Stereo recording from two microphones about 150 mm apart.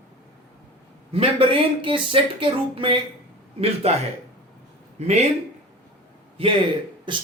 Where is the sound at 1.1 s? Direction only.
40° right (ahead or behind).